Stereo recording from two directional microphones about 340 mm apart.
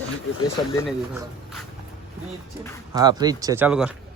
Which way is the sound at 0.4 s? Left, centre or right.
Centre.